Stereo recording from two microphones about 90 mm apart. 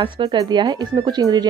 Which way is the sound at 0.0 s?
65° right (ahead or behind).